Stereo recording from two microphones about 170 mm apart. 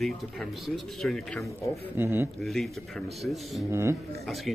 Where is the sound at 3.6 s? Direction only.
15° right (ahead or behind).